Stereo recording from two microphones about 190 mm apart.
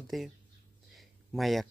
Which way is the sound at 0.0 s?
Centre (ahead or behind).